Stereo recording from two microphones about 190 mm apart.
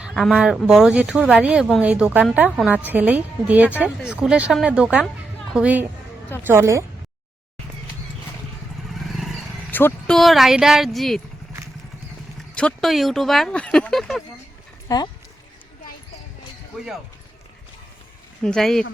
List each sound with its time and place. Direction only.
0.0 s speech: centre (ahead or behind)
9.1 s a sound: centre (ahead or behind)
9.7 s speech: 5° left (ahead or behind)
12.5 s speech: 5° left (ahead or behind)
14.8 s speech: 20° left (ahead or behind)
16.7 s speech: 5° right (ahead or behind)
18.4 s speech: 5° left (ahead or behind)